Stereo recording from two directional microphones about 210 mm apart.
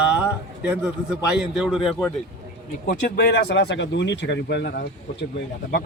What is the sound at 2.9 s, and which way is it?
Speech, 50° left (ahead or behind).